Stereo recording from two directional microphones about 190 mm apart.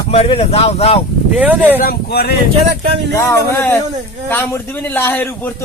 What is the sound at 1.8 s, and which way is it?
Speech, 55° left (ahead or behind).